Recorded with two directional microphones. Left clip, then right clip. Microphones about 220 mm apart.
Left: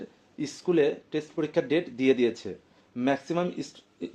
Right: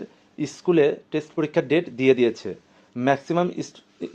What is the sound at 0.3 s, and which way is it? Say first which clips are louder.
Speech: right 5 dB; 35° right (ahead or behind).